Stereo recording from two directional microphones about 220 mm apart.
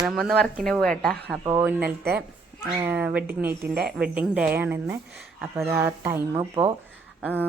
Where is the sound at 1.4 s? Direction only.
10° right (ahead or behind).